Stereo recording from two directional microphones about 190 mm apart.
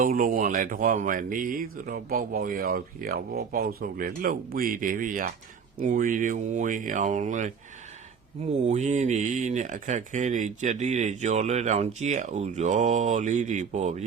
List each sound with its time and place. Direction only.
0.0 s speech: 45° right (ahead or behind)
8.6 s speech: 40° right (ahead or behind)